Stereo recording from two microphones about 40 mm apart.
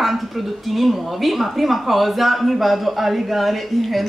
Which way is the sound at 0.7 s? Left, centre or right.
Centre.